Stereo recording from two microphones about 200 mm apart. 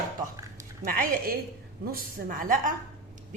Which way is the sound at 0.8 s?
45° right (ahead or behind).